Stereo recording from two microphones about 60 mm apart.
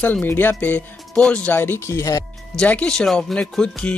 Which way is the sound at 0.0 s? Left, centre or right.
Left.